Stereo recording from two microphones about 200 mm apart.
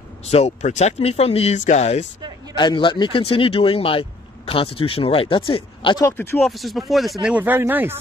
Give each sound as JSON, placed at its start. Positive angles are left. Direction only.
{"t": 0.3, "sound": "speech", "side_deg": 35}
{"t": 2.5, "sound": "speech", "side_deg": 25}
{"t": 6.4, "sound": "speech", "side_deg": 0}